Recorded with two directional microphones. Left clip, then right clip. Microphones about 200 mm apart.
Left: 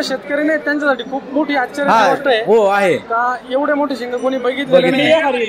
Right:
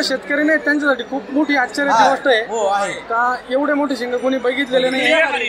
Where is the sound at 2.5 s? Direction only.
40° left (ahead or behind).